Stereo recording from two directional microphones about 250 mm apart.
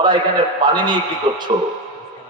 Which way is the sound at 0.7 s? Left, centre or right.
Centre.